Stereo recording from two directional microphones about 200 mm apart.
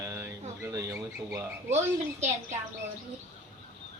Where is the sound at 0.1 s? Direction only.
15° right (ahead or behind).